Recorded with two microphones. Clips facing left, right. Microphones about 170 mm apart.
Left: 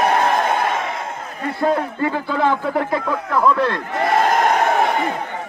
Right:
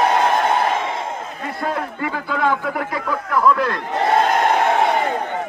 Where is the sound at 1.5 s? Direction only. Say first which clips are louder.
Left 6 dB; 30° left (ahead or behind).